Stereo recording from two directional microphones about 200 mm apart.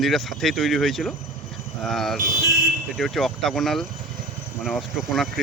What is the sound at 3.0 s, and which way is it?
Speech, centre (ahead or behind).